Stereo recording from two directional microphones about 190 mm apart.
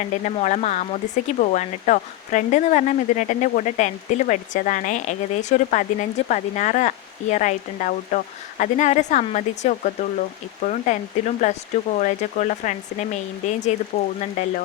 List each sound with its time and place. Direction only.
0.0 s speech: 35° left (ahead or behind)